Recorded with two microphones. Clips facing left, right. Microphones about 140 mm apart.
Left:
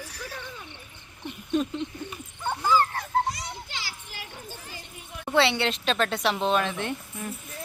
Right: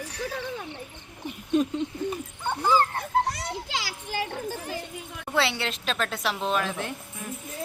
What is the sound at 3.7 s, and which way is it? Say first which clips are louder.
Children playing: right 8 dB; 85° right.